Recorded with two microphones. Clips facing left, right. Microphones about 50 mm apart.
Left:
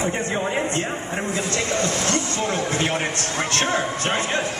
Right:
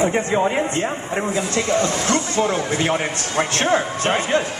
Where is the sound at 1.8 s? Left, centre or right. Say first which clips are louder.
Right 3 dB; right.